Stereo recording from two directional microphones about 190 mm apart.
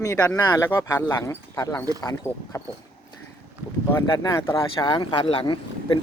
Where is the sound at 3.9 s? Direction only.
15° left (ahead or behind).